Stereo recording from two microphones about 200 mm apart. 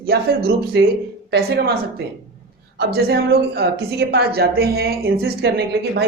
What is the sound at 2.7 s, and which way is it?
Speech, 55° right (ahead or behind).